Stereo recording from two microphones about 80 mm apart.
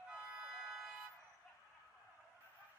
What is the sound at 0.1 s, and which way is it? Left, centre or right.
Music, centre.